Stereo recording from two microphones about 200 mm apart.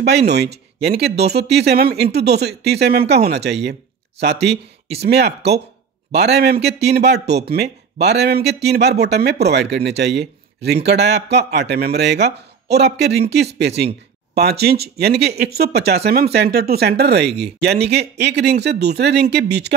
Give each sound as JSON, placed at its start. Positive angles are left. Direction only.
{"t": 0.0, "sound": "speech", "side_deg": -55}